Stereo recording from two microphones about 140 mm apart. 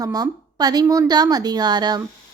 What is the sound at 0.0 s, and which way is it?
A woman's voice, 25° right (ahead or behind).